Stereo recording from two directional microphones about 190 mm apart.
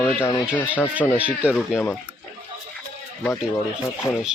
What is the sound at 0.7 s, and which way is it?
Speech, 5° right (ahead or behind).